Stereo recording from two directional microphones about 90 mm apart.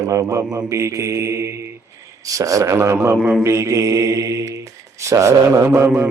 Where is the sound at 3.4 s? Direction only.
35° right (ahead or behind).